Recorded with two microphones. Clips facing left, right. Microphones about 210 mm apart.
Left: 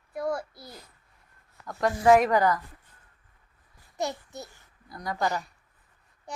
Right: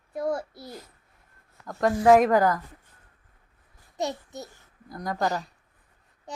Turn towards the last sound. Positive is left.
turn(degrees=-40)  # may be behind; listen again after turning